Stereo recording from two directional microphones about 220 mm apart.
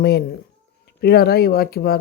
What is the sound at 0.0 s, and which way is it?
Speech, 45° left (ahead or behind).